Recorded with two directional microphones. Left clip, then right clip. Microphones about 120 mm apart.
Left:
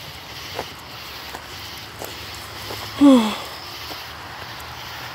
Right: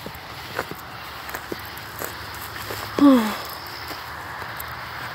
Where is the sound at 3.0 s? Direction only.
65° left (ahead or behind).